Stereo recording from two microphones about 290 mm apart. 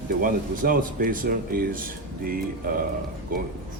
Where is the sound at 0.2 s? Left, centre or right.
Right.